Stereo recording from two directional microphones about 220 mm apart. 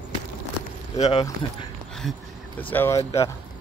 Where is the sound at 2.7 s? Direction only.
10° left (ahead or behind).